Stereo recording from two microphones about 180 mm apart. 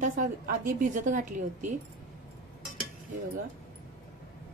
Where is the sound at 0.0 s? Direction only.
45° right (ahead or behind).